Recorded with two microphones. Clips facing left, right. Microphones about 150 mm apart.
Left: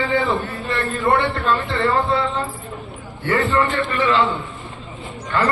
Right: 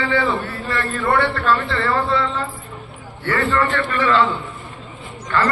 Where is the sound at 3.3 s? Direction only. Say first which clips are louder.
Left 1 dB; 20° left (ahead or behind).